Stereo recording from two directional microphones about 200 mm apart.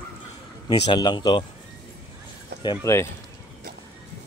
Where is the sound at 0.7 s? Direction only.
20° left (ahead or behind).